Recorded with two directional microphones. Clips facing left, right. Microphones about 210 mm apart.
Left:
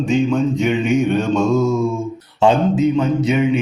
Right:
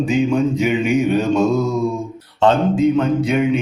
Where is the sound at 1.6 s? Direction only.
20° right (ahead or behind).